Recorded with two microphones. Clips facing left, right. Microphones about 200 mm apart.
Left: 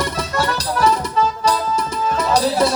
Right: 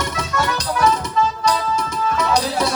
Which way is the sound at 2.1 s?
35° left (ahead or behind).